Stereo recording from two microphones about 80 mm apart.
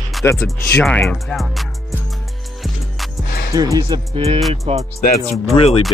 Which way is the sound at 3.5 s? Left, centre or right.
Right.